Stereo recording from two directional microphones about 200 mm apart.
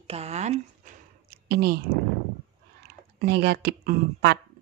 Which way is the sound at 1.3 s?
50° right (ahead or behind).